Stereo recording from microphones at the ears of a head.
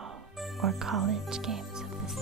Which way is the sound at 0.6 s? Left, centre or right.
Right.